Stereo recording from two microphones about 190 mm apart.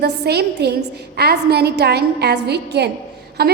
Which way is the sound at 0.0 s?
60° right (ahead or behind).